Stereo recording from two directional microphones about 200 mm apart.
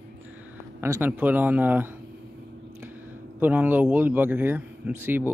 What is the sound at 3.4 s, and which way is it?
Speech, 10° right (ahead or behind).